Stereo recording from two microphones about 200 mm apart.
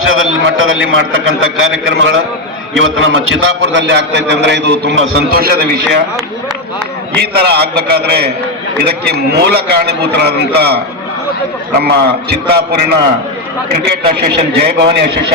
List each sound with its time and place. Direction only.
0.0 s a man's voice: 85° right; by 6.0 s 50° right (ahead or behind)
7.2 s a man's voice: 55° right (ahead or behind)
11.8 s a man's voice: 55° right (ahead or behind)
14.1 s a man's voice: 55° right (ahead or behind)